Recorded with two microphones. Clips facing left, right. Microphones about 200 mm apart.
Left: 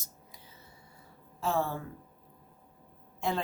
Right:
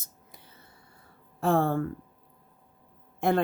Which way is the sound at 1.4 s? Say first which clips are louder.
Right 7 dB; 55° right (ahead or behind).